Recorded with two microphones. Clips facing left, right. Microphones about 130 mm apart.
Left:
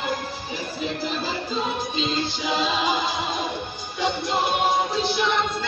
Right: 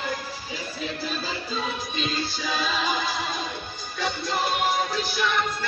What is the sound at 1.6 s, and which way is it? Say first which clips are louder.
Music: left 4 dB; 20° left (ahead or behind).